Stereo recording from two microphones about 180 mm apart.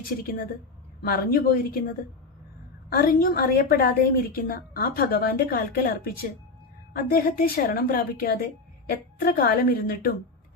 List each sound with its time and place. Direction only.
1.0 s a woman's voice: 55° left (ahead or behind)
2.9 s a woman's voice: 55° left (ahead or behind)